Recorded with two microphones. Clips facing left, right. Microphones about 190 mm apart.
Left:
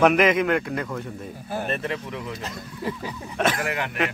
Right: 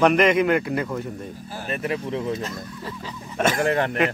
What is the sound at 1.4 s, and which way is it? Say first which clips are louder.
Speech: left 5 dB; 60° left (ahead or behind).